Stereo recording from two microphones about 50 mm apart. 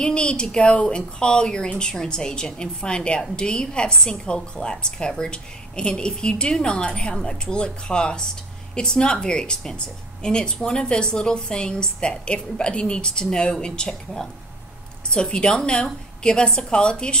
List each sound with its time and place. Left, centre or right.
0.0 s a woman's voice: centre